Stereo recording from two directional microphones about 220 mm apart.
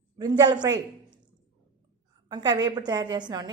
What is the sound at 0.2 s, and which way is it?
Speech, 20° right (ahead or behind).